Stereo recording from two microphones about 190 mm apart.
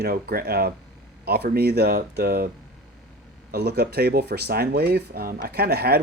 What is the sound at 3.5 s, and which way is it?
Speech, 55° right (ahead or behind).